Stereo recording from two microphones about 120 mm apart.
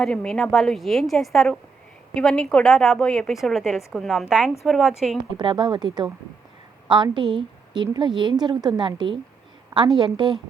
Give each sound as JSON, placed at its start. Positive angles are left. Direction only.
{"t": 0.0, "sound": "a woman's voice", "side_deg": 5}
{"t": 5.4, "sound": "a woman's voice", "side_deg": -40}